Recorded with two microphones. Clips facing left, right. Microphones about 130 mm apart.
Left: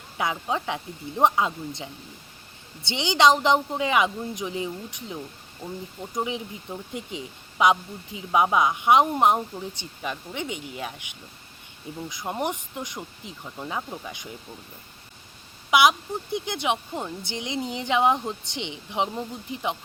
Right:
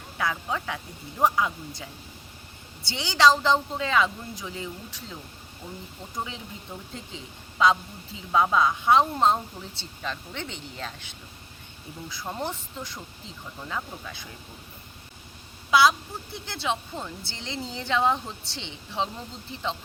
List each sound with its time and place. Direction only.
0.2 s speech: 20° left (ahead or behind)
15.7 s speech: 20° left (ahead or behind)